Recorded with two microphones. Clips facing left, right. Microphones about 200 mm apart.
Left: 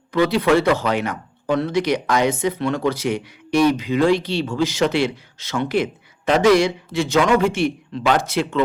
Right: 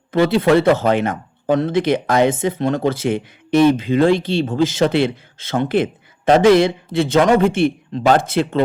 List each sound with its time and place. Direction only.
0.1 s speech: 50° right (ahead or behind)
3.5 s speech: 25° right (ahead or behind)
4.0 s speech: 50° right (ahead or behind)